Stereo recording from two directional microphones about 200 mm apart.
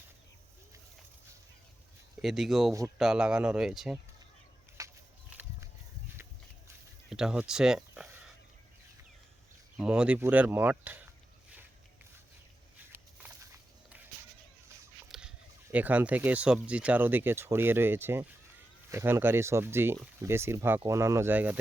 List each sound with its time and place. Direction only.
2.2 s speech: centre (ahead or behind)
4.8 s a sound: 15° right (ahead or behind)
7.1 s speech: 5° right (ahead or behind)
9.7 s speech: 5° right (ahead or behind)
12.9 s walk: 15° right (ahead or behind)
15.1 s a sound: centre (ahead or behind)
15.7 s speech: 5° right (ahead or behind)